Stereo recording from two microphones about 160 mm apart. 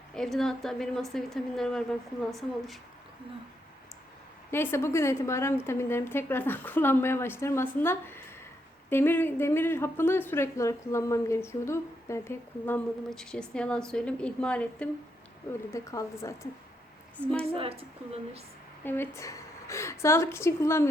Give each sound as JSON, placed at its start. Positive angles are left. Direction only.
{"t": 0.1, "sound": "a woman's voice", "side_deg": 0}
{"t": 4.5, "sound": "speech", "side_deg": 15}
{"t": 15.7, "sound": "speech", "side_deg": 20}
{"t": 17.5, "sound": "a woman's voice", "side_deg": -35}
{"t": 18.9, "sound": "speech", "side_deg": 15}